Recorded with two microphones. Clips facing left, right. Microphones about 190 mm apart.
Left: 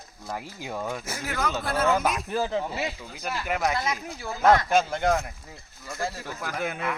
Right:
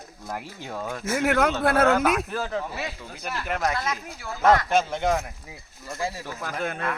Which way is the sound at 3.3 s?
5° left (ahead or behind).